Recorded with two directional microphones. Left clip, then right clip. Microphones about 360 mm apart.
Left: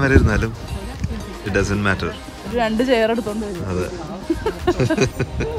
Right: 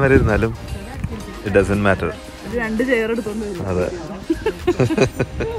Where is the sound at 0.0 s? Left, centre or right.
Centre.